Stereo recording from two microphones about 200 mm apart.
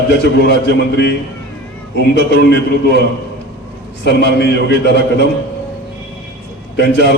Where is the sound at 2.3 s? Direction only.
55° left (ahead or behind).